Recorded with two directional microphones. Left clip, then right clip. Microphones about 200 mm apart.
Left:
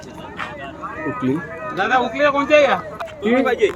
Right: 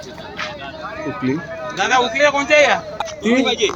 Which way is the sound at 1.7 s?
55° left (ahead or behind).